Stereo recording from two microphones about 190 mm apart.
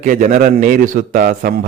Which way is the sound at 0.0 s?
45° right (ahead or behind).